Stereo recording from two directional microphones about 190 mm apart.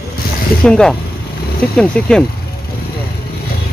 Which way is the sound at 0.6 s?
5° left (ahead or behind).